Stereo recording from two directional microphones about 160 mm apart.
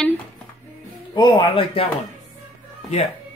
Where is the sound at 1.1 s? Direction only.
30° left (ahead or behind).